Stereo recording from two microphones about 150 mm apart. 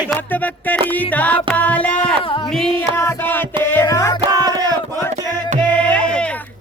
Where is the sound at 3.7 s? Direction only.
20° left (ahead or behind).